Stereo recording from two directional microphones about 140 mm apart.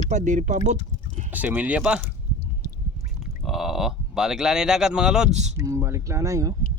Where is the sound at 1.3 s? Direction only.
10° right (ahead or behind).